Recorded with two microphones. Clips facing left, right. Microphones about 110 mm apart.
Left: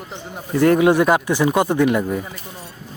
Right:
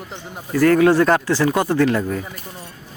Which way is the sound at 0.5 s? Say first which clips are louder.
Even; 20° left (ahead or behind).